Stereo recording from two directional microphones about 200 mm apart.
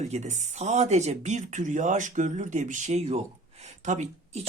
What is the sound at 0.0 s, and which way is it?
Speech, 35° right (ahead or behind).